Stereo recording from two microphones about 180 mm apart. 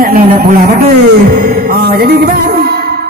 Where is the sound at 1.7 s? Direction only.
60° right (ahead or behind).